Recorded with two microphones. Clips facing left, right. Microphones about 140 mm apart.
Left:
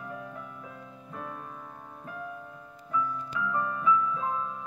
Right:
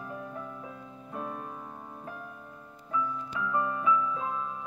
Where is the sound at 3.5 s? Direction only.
20° right (ahead or behind).